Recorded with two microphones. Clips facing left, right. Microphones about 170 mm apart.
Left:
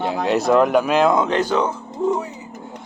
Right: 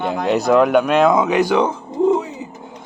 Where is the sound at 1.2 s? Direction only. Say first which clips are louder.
Right 3 dB; 10° right (ahead or behind).